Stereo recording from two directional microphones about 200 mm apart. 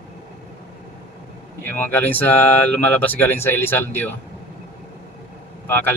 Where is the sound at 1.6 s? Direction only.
10° left (ahead or behind).